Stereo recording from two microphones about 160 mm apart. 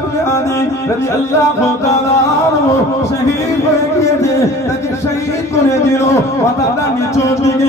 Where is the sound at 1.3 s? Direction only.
20° left (ahead or behind).